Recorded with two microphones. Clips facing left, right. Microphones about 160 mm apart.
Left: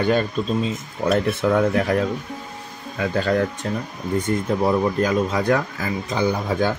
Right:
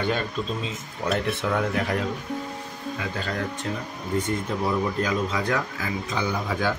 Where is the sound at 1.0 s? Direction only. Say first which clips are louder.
Left 6 dB; 45° left (ahead or behind).